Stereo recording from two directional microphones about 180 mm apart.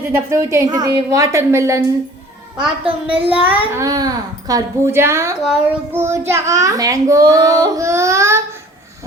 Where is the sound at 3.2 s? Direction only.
10° right (ahead or behind).